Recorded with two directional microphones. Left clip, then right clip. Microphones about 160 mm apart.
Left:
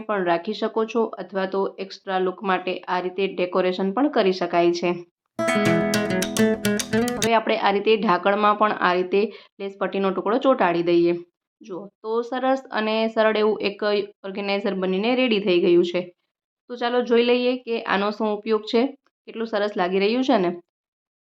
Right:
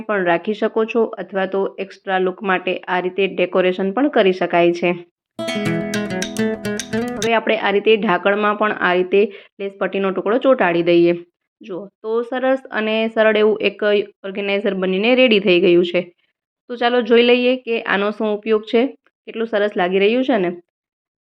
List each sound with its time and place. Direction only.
0.0 s speech: 20° right (ahead or behind)
5.5 s music: 50° left (ahead or behind)
5.9 s music: centre (ahead or behind)
7.3 s speech: 15° right (ahead or behind)
11.6 s speech: 15° right (ahead or behind)